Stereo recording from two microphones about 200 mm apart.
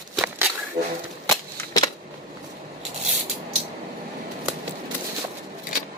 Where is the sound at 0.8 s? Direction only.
30° right (ahead or behind).